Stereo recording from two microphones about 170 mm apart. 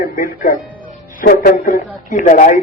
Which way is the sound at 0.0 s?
55° left (ahead or behind).